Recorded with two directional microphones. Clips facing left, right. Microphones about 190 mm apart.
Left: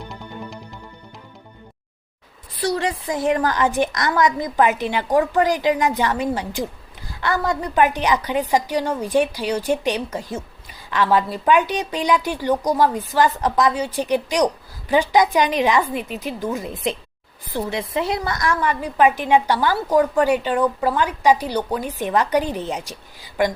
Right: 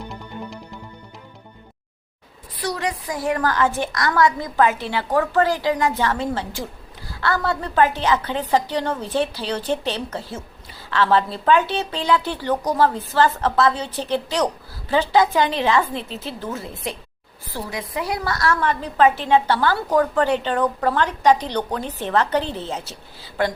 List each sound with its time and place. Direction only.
2.6 s a woman's voice: 30° left (ahead or behind)